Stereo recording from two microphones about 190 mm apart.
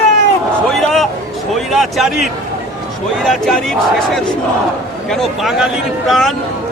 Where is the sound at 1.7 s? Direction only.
Centre (ahead or behind).